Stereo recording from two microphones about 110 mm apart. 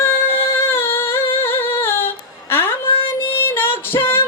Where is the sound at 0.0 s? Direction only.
20° left (ahead or behind).